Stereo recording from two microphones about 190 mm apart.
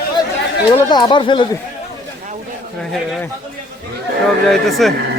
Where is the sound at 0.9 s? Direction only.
20° left (ahead or behind).